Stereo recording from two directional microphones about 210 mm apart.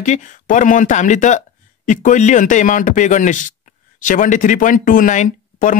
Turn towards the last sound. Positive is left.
turn(degrees=35)  # may be behind; listen again after turning